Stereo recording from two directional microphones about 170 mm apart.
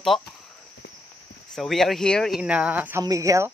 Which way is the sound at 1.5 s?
Centre (ahead or behind).